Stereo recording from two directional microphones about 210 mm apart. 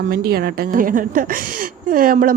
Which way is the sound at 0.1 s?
40° right (ahead or behind).